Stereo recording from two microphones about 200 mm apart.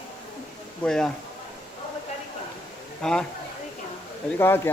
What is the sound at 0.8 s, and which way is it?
Speech, 5° left (ahead or behind).